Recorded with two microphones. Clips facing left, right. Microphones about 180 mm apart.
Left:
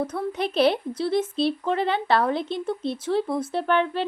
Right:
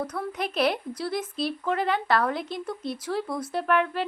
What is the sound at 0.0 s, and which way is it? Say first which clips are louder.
Speech: left 4 dB; 25° left (ahead or behind).